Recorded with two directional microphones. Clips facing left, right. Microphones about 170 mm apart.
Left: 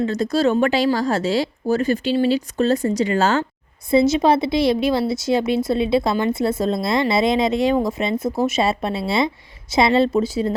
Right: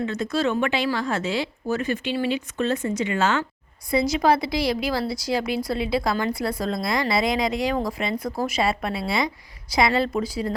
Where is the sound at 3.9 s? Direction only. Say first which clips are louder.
Left 5 dB; 25° left (ahead or behind).